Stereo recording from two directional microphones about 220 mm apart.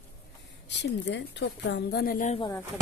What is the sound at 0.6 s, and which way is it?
Speech, 55° left (ahead or behind).